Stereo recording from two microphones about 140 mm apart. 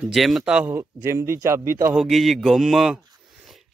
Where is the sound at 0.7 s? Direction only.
20° right (ahead or behind).